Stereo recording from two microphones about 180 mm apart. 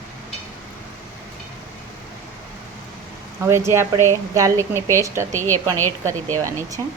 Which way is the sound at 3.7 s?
15° right (ahead or behind).